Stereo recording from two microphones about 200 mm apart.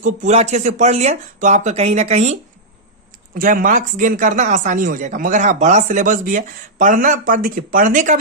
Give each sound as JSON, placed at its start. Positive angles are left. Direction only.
{"t": 0.0, "sound": "speech", "side_deg": -35}